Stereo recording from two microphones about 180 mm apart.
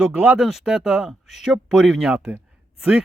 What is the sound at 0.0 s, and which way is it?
Speech, 10° right (ahead or behind).